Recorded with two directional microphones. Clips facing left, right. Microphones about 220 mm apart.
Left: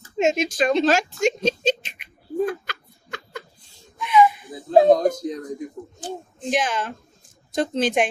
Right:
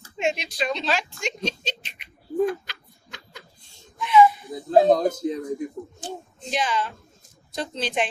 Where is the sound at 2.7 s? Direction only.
55° left (ahead or behind).